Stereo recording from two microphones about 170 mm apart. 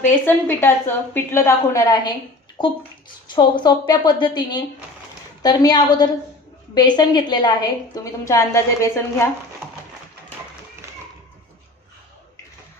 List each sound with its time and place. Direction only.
0.0 s a woman's voice: 10° left (ahead or behind)